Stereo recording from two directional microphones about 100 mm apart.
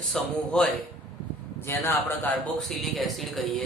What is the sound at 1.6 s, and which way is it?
Speech, 25° left (ahead or behind).